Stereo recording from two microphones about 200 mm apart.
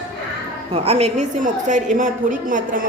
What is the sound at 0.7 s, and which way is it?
A woman's voice, 30° right (ahead or behind).